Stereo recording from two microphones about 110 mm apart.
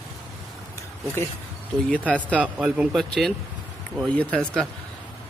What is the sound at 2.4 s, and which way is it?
Speech, 10° right (ahead or behind).